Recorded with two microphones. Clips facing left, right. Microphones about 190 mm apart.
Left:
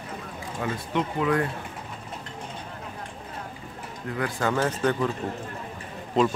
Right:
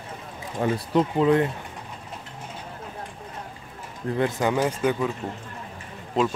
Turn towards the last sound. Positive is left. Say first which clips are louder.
# left 1 dB
turn(degrees=0)  # may be behind; listen again after turning